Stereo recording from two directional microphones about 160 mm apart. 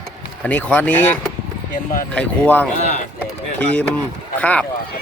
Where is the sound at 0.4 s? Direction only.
10° left (ahead or behind).